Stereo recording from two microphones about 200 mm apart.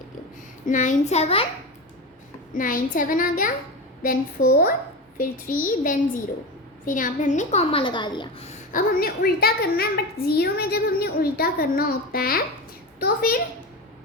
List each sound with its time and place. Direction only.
0.6 s a child's voice: 40° left (ahead or behind)
2.6 s a child's voice: 45° left (ahead or behind); by 8.4 s 25° left (ahead or behind)
8.7 s a child's voice: 50° left (ahead or behind)